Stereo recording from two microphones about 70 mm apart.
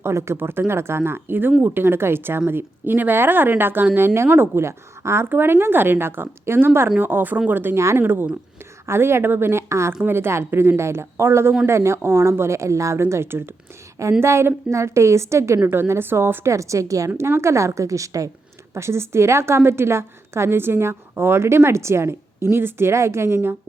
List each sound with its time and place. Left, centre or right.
0.0 s a woman's voice: right
7.8 s a woman's voice: right
8.0 s a woman's voice: right
17.2 s a woman's voice: right
18.7 s a woman's voice: right